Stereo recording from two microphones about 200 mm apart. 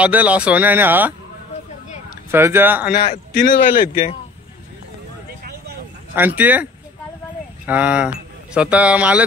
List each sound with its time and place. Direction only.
0.0 s speech: 5° right (ahead or behind)
2.3 s speech: 10° right (ahead or behind)
3.0 s a man's voice: 35° left (ahead or behind)
5.4 s a sound: 50° right (ahead or behind)
6.1 s speech: 10° right (ahead or behind)